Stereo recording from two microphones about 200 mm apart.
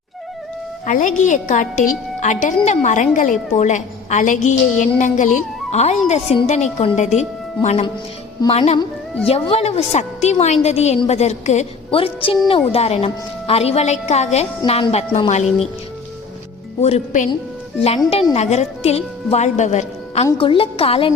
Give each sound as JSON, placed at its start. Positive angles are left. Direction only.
{"t": 0.9, "sound": "a woman's voice", "side_deg": 40}
{"t": 16.8, "sound": "a woman's voice", "side_deg": 35}